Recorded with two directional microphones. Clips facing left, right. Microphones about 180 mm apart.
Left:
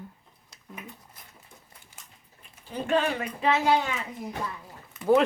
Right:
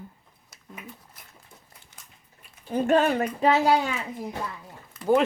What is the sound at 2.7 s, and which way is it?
A child's voice, 45° right (ahead or behind).